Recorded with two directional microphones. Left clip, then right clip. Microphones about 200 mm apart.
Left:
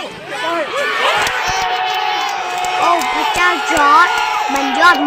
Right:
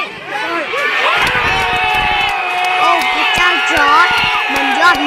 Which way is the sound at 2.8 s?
Centre (ahead or behind).